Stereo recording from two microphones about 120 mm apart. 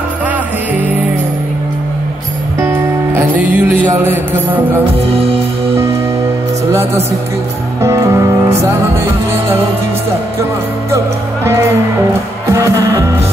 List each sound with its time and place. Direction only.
2.6 s music: 20° right (ahead or behind)
7.8 s music: 25° right (ahead or behind)
12.5 s music: 25° right (ahead or behind)